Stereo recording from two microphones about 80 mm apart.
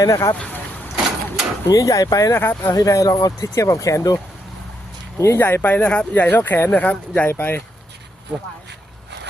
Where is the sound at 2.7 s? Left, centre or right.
Left.